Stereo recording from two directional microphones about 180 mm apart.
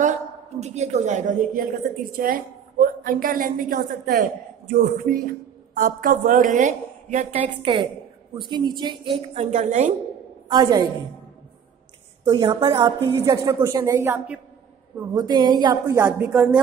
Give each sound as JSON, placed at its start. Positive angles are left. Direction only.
{"t": 0.0, "sound": "a woman's voice", "side_deg": -40}
{"t": 7.3, "sound": "a woman's voice", "side_deg": -30}
{"t": 10.5, "sound": "speech", "side_deg": -25}
{"t": 12.3, "sound": "a woman's voice", "side_deg": -20}
{"t": 15.1, "sound": "speech", "side_deg": -20}